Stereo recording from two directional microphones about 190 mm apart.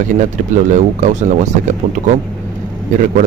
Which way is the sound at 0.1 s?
40° right (ahead or behind).